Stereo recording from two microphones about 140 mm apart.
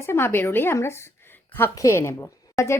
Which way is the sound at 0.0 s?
15° left (ahead or behind).